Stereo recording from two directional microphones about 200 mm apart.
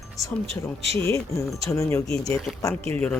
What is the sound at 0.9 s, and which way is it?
Speech, 30° right (ahead or behind).